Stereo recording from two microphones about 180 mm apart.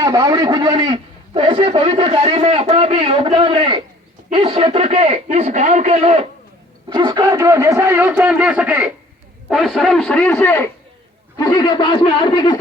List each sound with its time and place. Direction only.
0.0 s a man's voice: 20° right (ahead or behind)
6.9 s a man's voice: 20° right (ahead or behind); by 10.7 s 10° left (ahead or behind)
11.3 s speech: 25° left (ahead or behind)